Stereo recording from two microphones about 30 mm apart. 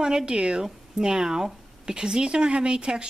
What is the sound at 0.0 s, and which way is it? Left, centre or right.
Speech, right.